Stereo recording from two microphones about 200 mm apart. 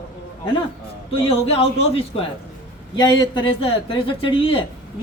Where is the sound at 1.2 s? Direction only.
30° left (ahead or behind).